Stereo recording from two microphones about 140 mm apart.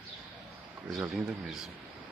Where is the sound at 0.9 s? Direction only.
5° right (ahead or behind).